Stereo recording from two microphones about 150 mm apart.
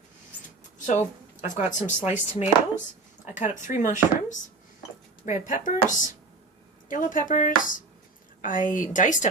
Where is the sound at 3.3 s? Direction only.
55° left (ahead or behind).